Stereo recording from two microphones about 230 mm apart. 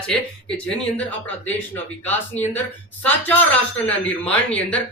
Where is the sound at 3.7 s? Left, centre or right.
Centre.